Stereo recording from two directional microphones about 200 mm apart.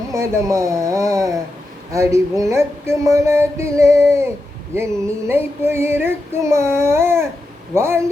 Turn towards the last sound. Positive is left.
turn(degrees=-15)  # may be behind; listen again after turning